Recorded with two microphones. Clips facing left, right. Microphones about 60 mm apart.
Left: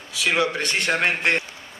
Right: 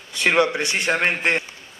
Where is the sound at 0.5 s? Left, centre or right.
Centre.